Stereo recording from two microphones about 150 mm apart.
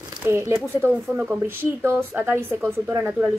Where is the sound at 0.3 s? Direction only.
15° right (ahead or behind).